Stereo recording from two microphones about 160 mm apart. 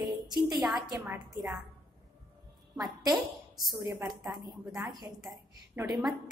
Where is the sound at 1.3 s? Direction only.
20° right (ahead or behind).